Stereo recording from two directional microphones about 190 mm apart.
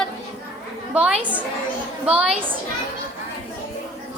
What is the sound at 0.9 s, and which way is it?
A woman's voice, 5° right (ahead or behind).